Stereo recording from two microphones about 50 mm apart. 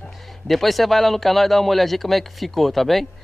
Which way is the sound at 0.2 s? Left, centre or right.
Centre.